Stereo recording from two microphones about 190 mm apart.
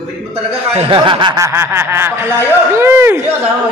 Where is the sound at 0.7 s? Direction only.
25° right (ahead or behind).